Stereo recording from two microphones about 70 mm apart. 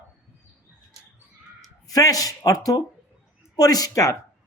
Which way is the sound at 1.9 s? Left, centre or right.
Left.